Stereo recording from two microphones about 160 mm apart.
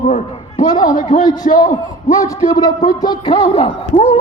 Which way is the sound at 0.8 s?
55° left (ahead or behind).